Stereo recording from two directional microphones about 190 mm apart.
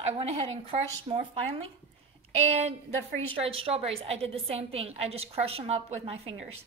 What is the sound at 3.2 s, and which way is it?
Speech, 30° right (ahead or behind).